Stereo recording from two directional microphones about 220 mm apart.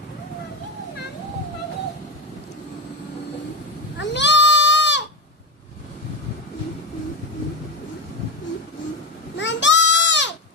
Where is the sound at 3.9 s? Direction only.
55° left (ahead or behind).